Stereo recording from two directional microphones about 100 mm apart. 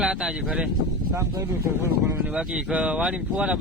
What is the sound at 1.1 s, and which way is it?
Speech, 30° right (ahead or behind).